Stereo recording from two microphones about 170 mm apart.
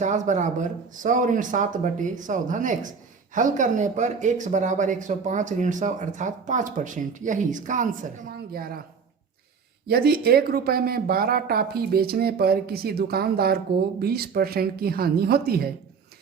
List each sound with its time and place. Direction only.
0.0 s speech: 45° right (ahead or behind)
8.5 s speech: 60° right (ahead or behind)
9.8 s speech: 65° right (ahead or behind)